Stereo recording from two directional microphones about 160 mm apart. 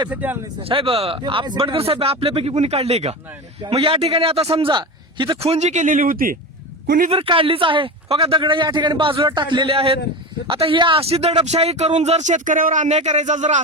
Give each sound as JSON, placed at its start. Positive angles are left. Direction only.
{"t": 0.1, "sound": "speech", "side_deg": -10}
{"t": 0.6, "sound": "a man's voice", "side_deg": -35}
{"t": 7.1, "sound": "a man's voice", "side_deg": -35}